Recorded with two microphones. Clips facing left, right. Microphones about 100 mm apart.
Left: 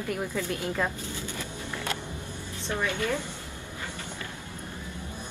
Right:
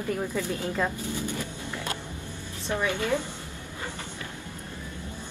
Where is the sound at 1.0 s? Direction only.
15° right (ahead or behind).